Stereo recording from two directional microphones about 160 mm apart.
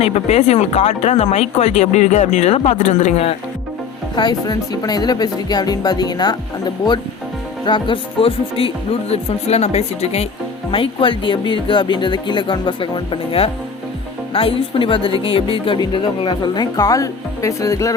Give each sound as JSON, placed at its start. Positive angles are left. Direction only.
{"t": 0.0, "sound": "speech", "side_deg": 40}
{"t": 4.1, "sound": "speech", "side_deg": 25}
{"t": 7.6, "sound": "speech", "side_deg": 30}